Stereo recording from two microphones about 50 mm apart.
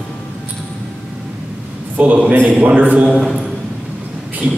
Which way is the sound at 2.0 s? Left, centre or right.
Right.